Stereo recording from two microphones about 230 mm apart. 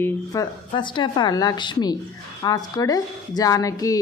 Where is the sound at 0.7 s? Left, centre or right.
Left.